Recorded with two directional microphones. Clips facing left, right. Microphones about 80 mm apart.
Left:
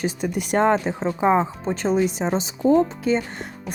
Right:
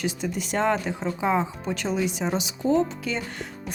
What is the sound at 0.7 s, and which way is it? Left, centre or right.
Speech, left.